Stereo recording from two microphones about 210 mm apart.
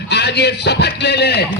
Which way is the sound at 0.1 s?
50° left (ahead or behind).